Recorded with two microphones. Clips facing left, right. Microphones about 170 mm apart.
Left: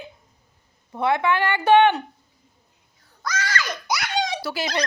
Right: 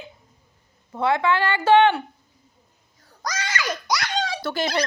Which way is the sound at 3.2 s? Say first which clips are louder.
Left 2 dB; 35° right (ahead or behind).